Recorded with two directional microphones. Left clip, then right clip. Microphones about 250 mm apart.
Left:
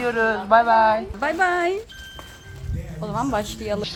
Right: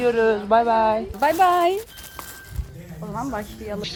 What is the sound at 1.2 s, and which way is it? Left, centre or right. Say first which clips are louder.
Speech: right 4 dB; centre.